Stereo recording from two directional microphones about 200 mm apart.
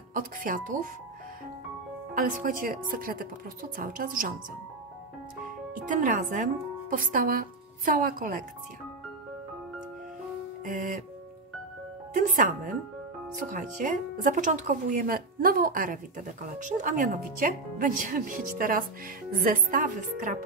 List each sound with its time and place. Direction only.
0.1 s speech: 45° right (ahead or behind)
2.1 s speech: 40° right (ahead or behind)
5.9 s speech: 40° right (ahead or behind)
10.6 s speech: 40° right (ahead or behind)
12.2 s speech: 40° right (ahead or behind)